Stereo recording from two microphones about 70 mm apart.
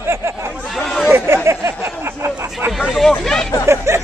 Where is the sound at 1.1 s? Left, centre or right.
Right.